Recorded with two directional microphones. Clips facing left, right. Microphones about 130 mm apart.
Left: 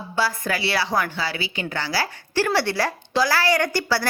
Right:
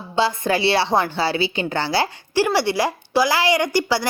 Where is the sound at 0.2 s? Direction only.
25° right (ahead or behind).